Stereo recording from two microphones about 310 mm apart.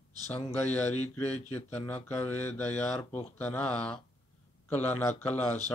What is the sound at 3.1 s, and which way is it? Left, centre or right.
Speech, centre.